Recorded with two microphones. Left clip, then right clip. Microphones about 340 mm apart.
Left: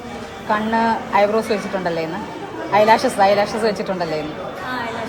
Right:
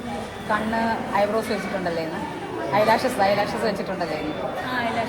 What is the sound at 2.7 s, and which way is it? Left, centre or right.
Speech, left.